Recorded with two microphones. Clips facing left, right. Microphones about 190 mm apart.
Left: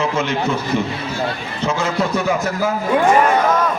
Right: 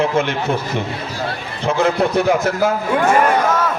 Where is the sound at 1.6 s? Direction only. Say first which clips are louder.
Right 3 dB; 60° right (ahead or behind).